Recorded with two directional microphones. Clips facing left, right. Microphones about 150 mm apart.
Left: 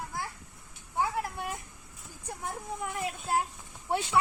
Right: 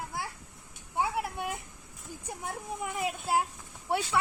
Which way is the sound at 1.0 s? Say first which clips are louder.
Even; 15° right (ahead or behind).